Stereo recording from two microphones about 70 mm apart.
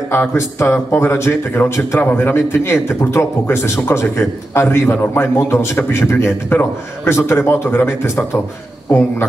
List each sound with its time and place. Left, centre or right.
0.1 s a man's voice: left